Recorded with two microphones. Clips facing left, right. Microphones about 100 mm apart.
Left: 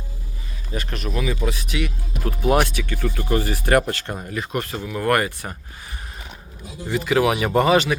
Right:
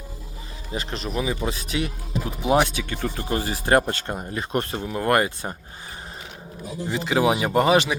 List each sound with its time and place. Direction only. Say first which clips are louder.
0.7 s speech: left 1 dB; 30° right (ahead or behind)
2.2 s speech: left 1 dB; 15° right (ahead or behind)
6.9 s speech: left 2 dB; 20° right (ahead or behind)
7.3 s speech: left 1 dB; 10° right (ahead or behind)